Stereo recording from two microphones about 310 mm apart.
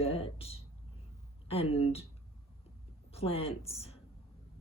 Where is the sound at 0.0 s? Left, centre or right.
Centre.